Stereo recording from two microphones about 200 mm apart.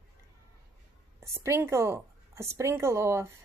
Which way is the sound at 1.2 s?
15° right (ahead or behind).